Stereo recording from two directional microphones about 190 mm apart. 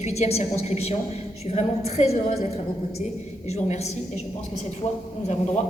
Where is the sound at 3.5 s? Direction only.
35° left (ahead or behind).